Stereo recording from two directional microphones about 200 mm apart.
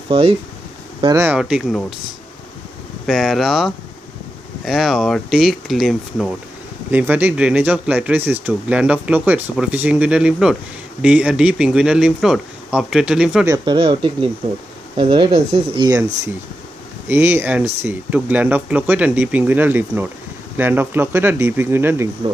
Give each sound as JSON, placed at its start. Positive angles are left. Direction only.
{"t": 0.1, "sound": "speech", "side_deg": -25}
{"t": 1.0, "sound": "speech", "side_deg": -15}
{"t": 3.1, "sound": "speech", "side_deg": 0}
{"t": 13.5, "sound": "speech", "side_deg": -25}
{"t": 17.1, "sound": "speech", "side_deg": -10}